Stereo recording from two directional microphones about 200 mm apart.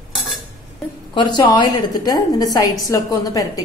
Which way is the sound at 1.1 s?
20° left (ahead or behind).